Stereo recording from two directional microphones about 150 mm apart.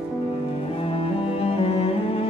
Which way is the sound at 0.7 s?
40° left (ahead or behind).